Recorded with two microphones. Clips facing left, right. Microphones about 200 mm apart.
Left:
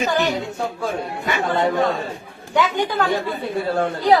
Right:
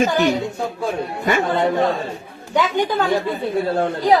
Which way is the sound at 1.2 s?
45° right (ahead or behind).